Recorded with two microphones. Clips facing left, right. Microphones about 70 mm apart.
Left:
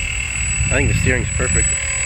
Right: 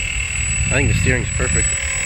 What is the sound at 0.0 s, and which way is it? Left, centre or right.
Vehicle, centre.